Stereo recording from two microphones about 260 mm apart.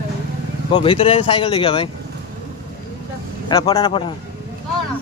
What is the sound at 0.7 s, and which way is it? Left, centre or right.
Speech, centre.